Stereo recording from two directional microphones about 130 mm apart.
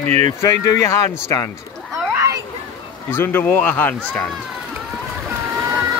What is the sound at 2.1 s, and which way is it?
Children playing, 20° right (ahead or behind).